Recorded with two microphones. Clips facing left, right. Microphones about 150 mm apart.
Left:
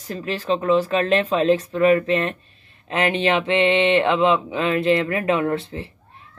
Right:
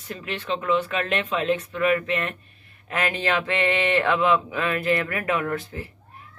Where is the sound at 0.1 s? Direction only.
35° left (ahead or behind).